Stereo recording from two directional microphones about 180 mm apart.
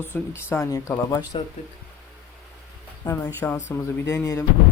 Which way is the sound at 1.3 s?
30° left (ahead or behind).